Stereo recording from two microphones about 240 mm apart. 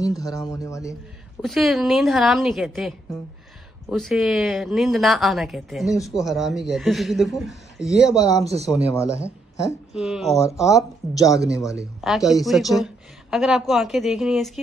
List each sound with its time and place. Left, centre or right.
0.2 s speech: centre
1.4 s speech: centre
3.9 s speech: centre
8.2 s speech: centre
8.6 s speech: centre
9.1 s speech: centre
9.9 s speech: centre